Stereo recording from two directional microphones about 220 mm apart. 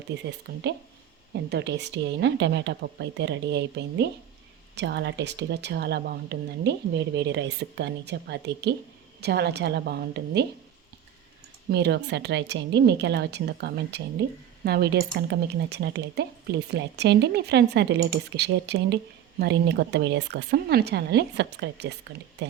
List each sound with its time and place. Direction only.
1.5 s speech: 50° right (ahead or behind)
11.7 s speech: 50° right (ahead or behind)